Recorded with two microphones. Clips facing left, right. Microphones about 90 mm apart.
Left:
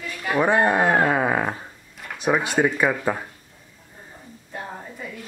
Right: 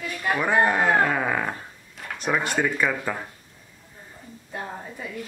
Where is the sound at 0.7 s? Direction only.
20° left (ahead or behind).